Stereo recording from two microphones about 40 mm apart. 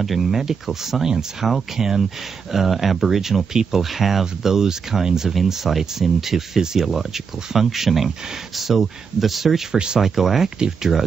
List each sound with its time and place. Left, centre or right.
0.0 s speech: centre